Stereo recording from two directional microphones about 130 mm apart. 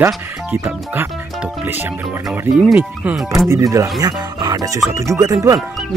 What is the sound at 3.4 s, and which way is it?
Speech, 25° right (ahead or behind).